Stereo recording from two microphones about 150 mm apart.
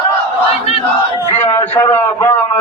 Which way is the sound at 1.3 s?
15° left (ahead or behind).